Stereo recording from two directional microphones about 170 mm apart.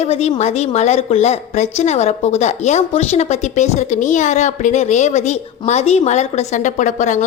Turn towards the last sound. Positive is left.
turn(degrees=45)  # may be behind; listen again after turning